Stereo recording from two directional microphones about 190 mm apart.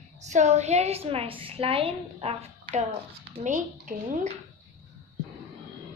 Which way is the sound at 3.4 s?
40° right (ahead or behind).